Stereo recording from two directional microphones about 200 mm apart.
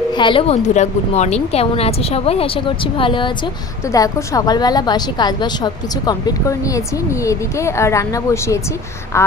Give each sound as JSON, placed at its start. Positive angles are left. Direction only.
{"t": 0.2, "sound": "a woman's voice", "side_deg": 25}